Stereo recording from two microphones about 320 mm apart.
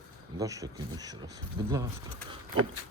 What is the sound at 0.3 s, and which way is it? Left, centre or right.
Speech, centre.